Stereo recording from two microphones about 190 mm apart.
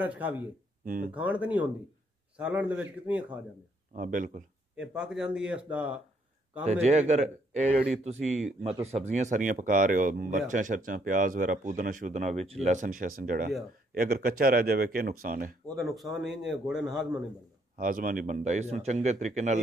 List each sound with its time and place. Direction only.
0.0 s a man's voice: 10° right (ahead or behind)
0.8 s speech: 45° right (ahead or behind)
1.1 s a man's voice: 10° right (ahead or behind)
3.9 s speech: 45° right (ahead or behind)
4.7 s a man's voice: 5° right (ahead or behind)
6.6 s speech: 35° right (ahead or behind)
8.4 s a man's voice: centre (ahead or behind)
8.8 s speech: 35° right (ahead or behind)
15.7 s a man's voice: centre (ahead or behind)
17.7 s speech: 45° right (ahead or behind)